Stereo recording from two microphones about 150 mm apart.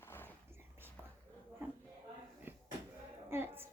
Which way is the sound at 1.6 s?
15° right (ahead or behind).